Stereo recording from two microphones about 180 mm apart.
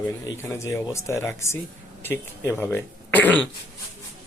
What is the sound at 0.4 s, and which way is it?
Speech, 15° left (ahead or behind).